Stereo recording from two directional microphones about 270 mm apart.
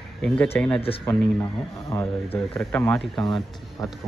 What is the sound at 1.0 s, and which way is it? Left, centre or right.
Speech, centre.